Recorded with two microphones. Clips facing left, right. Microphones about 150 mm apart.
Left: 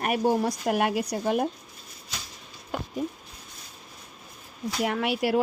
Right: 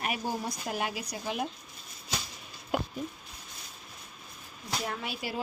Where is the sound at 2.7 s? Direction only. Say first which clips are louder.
Right 2 dB; 10° right (ahead or behind).